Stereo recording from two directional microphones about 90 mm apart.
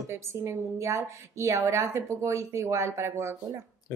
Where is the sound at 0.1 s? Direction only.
30° right (ahead or behind).